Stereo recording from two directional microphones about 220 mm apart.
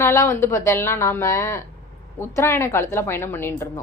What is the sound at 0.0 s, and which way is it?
A woman's voice, 10° left (ahead or behind).